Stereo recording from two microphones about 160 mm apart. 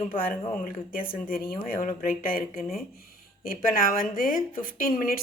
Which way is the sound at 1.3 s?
65° left (ahead or behind).